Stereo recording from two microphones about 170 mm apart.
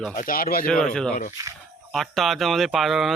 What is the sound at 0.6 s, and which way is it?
Speech, 5° left (ahead or behind).